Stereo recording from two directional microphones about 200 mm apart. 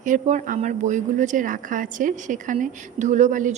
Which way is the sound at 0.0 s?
35° right (ahead or behind).